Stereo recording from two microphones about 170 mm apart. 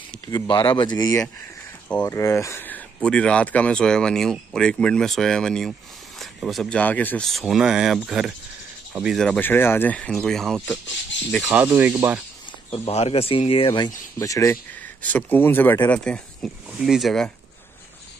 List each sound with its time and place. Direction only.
0.3 s speech: 30° left (ahead or behind); by 12.2 s 10° right (ahead or behind)
12.7 s speech: 35° left (ahead or behind); by 17.3 s centre (ahead or behind)